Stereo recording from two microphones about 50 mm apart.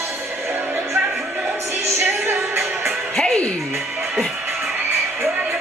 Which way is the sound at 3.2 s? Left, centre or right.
Left.